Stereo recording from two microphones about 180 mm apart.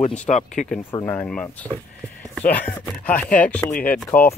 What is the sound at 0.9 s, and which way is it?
Chopping, 10° left (ahead or behind).